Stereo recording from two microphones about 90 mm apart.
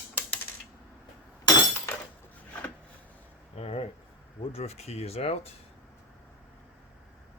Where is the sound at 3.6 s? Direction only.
90° left.